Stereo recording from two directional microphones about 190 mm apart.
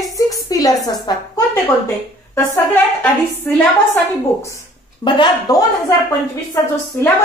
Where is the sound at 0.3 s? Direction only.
20° left (ahead or behind).